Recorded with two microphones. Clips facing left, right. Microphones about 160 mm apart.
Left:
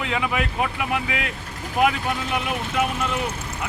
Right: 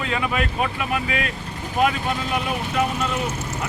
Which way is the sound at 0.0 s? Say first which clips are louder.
Right 1 dB; 15° left (ahead or behind).